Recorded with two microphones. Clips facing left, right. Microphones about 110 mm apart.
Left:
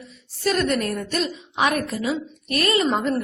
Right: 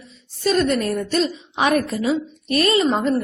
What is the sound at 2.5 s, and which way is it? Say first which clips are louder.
Speech: right 3 dB; 25° right (ahead or behind).